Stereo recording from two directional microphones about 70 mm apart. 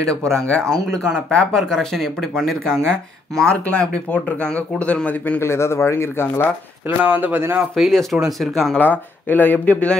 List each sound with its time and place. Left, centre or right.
0.0 s speech: centre
5.4 s speech: left
7.0 s speech: right
7.9 s speech: centre
8.7 s speech: left